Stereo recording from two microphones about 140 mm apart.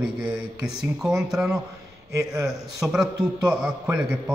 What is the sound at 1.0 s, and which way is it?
Speech, centre (ahead or behind).